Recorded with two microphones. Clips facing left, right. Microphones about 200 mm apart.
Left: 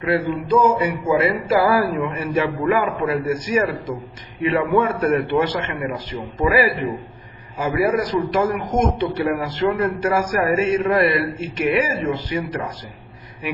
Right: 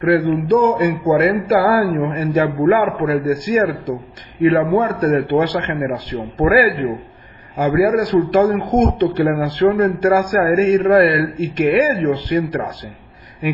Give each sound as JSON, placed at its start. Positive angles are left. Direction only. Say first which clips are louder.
{"t": 0.0, "sound": "speech", "louder": "right 6 dB", "side_deg": -55}